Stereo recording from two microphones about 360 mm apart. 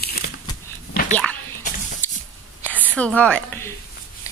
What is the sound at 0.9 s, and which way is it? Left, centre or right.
Dog, left.